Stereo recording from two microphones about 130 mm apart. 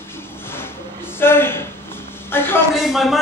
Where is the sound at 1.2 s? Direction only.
15° left (ahead or behind).